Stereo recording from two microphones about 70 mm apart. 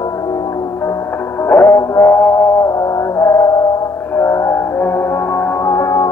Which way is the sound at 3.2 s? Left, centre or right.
Left.